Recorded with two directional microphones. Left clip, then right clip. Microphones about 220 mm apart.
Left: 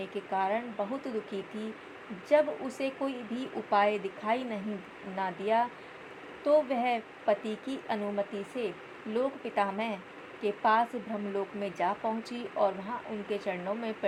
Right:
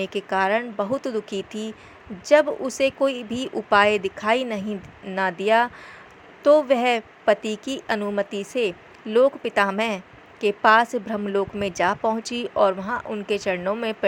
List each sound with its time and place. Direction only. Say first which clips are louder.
0.0 s a woman's voice: right 9 dB; 30° right (ahead or behind)